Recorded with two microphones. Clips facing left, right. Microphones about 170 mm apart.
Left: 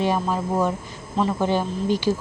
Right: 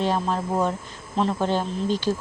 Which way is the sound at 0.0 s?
10° left (ahead or behind).